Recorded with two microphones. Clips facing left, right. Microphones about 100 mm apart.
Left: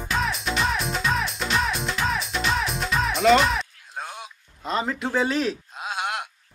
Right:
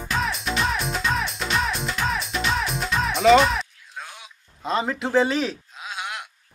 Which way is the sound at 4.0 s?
45° left (ahead or behind).